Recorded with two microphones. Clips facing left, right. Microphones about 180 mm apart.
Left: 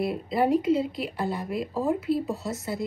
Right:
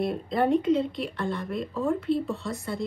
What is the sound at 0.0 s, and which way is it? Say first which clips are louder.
A woman's voice: even; 5° left (ahead or behind).